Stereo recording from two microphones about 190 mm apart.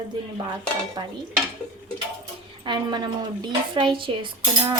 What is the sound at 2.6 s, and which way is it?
Speech, 20° right (ahead or behind).